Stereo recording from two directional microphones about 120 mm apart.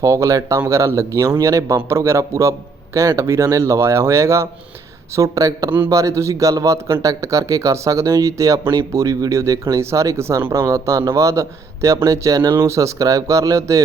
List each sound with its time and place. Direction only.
0.0 s speech: 25° right (ahead or behind)